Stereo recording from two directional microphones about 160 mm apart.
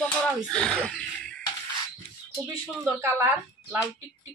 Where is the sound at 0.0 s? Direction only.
5° left (ahead or behind).